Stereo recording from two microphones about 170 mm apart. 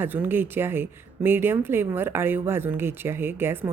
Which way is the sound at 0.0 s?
10° right (ahead or behind).